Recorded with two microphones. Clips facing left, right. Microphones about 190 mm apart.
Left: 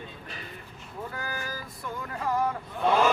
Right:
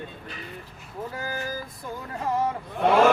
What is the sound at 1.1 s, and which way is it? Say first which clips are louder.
Vehicle: right 5 dB; 25° right (ahead or behind).